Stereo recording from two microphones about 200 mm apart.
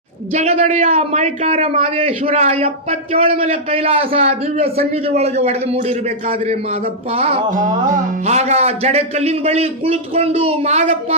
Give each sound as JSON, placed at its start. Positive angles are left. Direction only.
{"t": 0.3, "sound": "a man's voice", "side_deg": -35}
{"t": 7.1, "sound": "music", "side_deg": -30}
{"t": 8.3, "sound": "a man's voice", "side_deg": -35}